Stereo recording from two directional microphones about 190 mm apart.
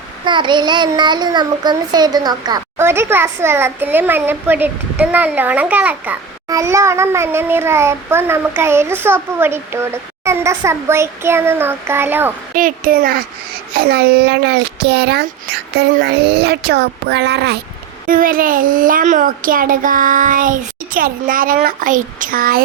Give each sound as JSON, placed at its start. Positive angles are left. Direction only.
{"t": 0.3, "sound": "a child's voice", "side_deg": -25}
{"t": 12.5, "sound": "a child's voice", "side_deg": -45}
{"t": 18.0, "sound": "speech", "side_deg": -50}